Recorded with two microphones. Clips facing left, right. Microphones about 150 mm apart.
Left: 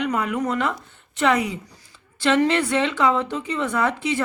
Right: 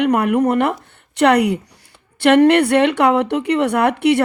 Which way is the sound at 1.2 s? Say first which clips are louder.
Right 7 dB; 70° right (ahead or behind).